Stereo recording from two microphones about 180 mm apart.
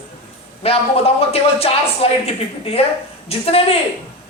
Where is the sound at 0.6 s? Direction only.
35° left (ahead or behind).